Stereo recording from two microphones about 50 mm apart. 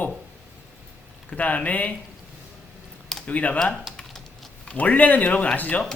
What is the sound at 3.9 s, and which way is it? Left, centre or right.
Typing, centre.